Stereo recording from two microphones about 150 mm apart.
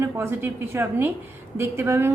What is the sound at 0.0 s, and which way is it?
A woman's voice, 15° right (ahead or behind).